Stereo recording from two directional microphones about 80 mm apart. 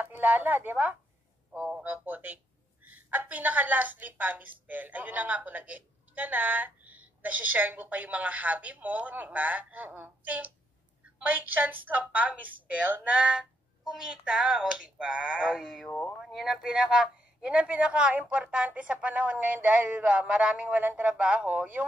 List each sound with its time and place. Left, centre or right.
0.0 s a woman's voice: right